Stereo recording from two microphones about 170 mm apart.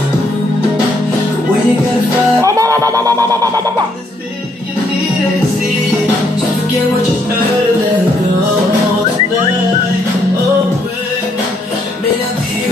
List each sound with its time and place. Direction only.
2.4 s music: 20° right (ahead or behind)